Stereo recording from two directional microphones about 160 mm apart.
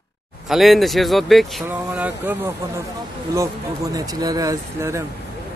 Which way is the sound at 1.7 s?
10° right (ahead or behind).